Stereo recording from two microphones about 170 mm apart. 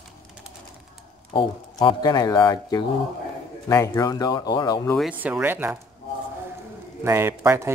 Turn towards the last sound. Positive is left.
turn(degrees=-15)  # may be behind; listen again after turning